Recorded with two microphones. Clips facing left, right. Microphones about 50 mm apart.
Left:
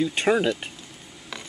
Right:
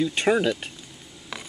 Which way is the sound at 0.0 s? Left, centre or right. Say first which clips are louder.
Even; centre.